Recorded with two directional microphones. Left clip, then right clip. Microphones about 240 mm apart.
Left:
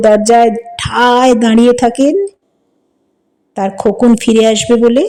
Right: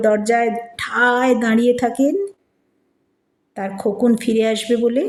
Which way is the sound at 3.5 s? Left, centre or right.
Left.